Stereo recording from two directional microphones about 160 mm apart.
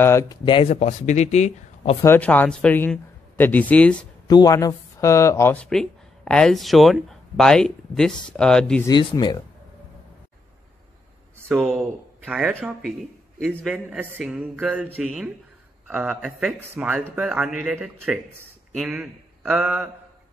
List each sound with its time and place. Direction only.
0.0 s speech: 20° left (ahead or behind)
0.7 s speech: 45° left (ahead or behind)
2.0 s speech: 10° left (ahead or behind)
4.3 s speech: 25° left (ahead or behind); by 8.8 s 5° left (ahead or behind)
8.8 s speech: 25° left (ahead or behind)
11.5 s speech: centre (ahead or behind)